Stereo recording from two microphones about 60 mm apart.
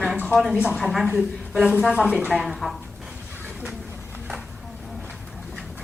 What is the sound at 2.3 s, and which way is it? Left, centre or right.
Speech, centre.